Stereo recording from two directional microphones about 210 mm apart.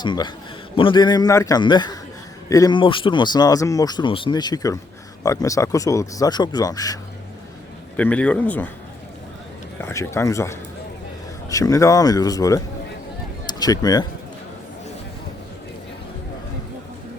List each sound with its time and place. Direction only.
0.0 s speech: 20° left (ahead or behind)
7.9 s speech: 5° left (ahead or behind)
9.8 s speech: 15° left (ahead or behind)